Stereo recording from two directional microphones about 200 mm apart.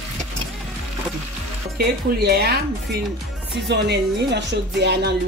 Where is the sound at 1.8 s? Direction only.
55° right (ahead or behind).